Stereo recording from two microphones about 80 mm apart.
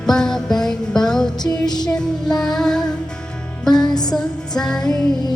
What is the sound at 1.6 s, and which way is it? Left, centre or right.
Music, left.